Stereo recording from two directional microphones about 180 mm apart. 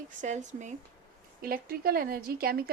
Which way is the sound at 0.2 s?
40° right (ahead or behind).